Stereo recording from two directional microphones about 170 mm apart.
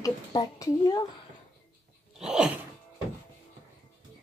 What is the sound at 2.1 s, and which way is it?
Sneeze, 5° right (ahead or behind).